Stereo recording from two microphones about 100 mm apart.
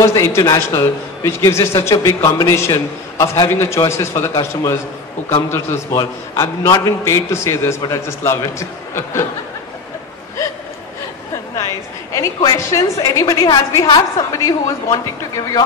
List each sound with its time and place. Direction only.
0.0 s a man's voice: 30° left (ahead or behind)
11.5 s a sound: 35° left (ahead or behind)
12.5 s a man's voice: 30° left (ahead or behind)